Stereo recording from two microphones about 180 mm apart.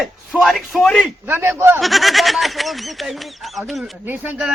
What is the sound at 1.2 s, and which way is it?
Speech, 10° right (ahead or behind).